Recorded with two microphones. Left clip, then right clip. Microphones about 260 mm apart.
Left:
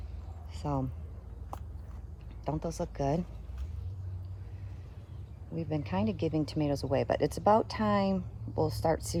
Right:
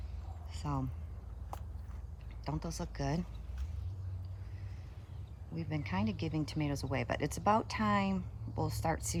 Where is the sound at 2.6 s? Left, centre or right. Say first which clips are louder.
Left 8 dB; right.